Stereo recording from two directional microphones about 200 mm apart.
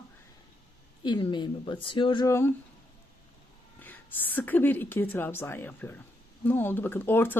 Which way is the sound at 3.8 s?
10° left (ahead or behind).